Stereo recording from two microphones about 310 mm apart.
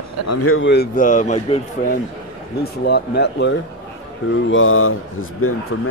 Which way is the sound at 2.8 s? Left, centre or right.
Left.